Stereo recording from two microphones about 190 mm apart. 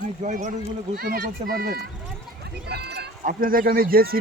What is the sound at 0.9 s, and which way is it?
Speech, 55° right (ahead or behind).